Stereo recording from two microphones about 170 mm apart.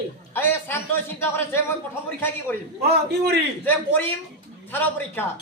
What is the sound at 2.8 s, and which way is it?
Speech, 70° right (ahead or behind).